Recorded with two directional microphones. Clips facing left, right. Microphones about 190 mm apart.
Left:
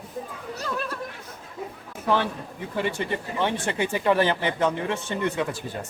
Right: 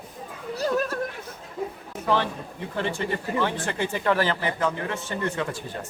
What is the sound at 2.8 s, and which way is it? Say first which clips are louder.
Speech: left 1 dB; 20° left (ahead or behind).